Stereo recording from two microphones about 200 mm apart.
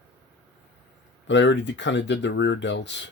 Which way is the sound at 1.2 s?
65° left (ahead or behind).